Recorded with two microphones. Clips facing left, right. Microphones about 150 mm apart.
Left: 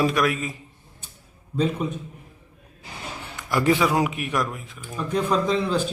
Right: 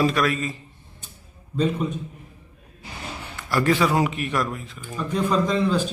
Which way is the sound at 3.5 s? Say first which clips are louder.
Even; 15° left (ahead or behind).